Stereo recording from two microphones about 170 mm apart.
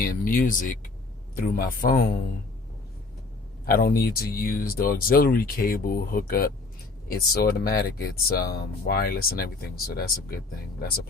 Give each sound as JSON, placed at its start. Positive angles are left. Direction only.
{"t": 0.0, "sound": "speech", "side_deg": 55}
{"t": 3.7, "sound": "speech", "side_deg": 60}